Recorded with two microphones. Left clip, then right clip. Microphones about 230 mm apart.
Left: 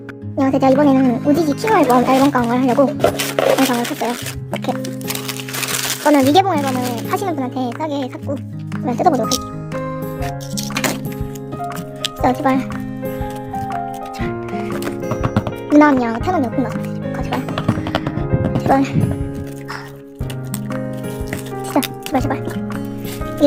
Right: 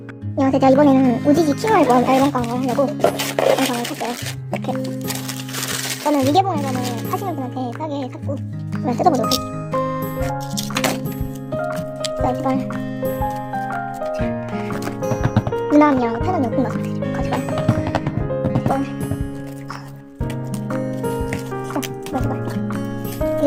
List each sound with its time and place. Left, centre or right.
0.3 s speech: centre
2.4 s speech: centre
3.0 s speech: centre
4.5 s music: centre
6.0 s speech: centre
12.0 s speech: centre
14.5 s music: centre
21.7 s music: centre
23.4 s speech: centre